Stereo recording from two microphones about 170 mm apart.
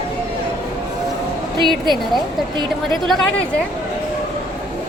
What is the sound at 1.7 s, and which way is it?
A woman's voice, centre (ahead or behind).